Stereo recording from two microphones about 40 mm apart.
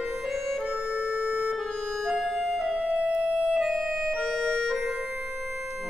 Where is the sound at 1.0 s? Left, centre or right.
Right.